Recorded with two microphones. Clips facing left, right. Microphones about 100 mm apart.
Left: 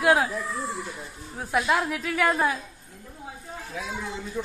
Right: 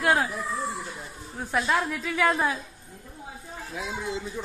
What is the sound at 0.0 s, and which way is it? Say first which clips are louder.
Speech: left 3 dB; 5° left (ahead or behind).